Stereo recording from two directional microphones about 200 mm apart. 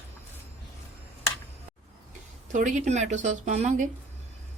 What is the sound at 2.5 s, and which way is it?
Speech, 40° right (ahead or behind).